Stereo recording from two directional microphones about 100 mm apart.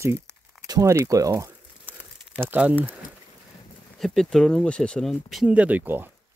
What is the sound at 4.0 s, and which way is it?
Speech, 5° left (ahead or behind).